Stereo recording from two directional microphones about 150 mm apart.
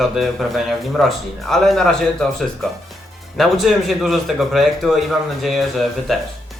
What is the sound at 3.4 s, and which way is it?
Speech, centre (ahead or behind).